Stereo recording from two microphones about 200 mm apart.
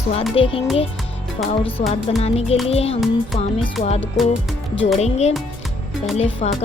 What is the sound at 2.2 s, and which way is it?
Speech, 30° left (ahead or behind).